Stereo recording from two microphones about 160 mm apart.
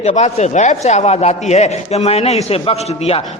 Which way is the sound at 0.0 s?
45° left (ahead or behind).